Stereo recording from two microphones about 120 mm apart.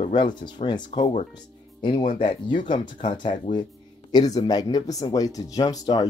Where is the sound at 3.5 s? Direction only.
55° left (ahead or behind).